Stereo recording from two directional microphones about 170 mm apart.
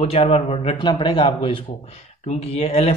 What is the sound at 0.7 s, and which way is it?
Speech, 25° left (ahead or behind).